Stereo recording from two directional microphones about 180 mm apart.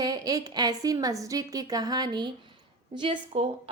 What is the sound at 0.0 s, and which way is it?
A woman's voice, 20° right (ahead or behind).